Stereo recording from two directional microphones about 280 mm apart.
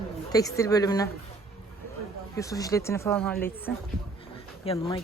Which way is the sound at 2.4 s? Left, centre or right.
Centre.